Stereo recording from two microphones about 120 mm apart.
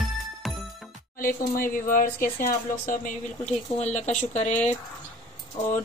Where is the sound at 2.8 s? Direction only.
80° left.